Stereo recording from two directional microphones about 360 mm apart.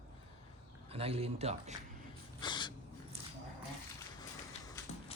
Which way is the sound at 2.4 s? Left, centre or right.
Centre.